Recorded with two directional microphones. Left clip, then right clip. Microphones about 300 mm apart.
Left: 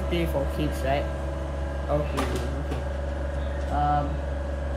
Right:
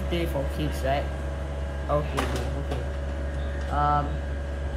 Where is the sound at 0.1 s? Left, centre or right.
Centre.